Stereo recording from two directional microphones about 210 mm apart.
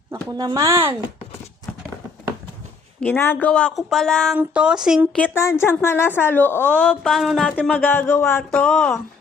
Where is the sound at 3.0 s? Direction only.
10° left (ahead or behind).